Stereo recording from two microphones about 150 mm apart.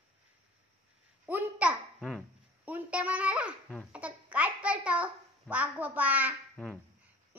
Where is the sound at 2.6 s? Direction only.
10° right (ahead or behind).